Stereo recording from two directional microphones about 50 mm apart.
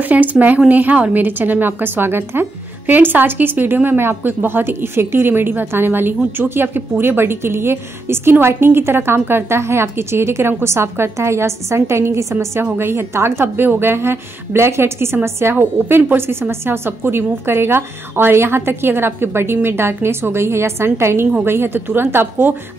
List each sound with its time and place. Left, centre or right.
0.0 s a woman's voice: right
12.7 s a woman's voice: right
15.5 s speech: right